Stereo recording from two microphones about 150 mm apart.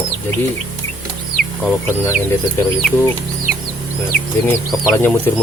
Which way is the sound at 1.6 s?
15° left (ahead or behind).